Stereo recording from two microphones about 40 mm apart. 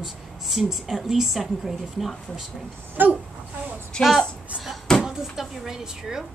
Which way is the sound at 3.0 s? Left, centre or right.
Right.